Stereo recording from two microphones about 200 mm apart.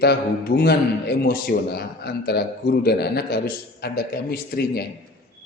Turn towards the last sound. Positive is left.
turn(degrees=50)  # may be behind; listen again after turning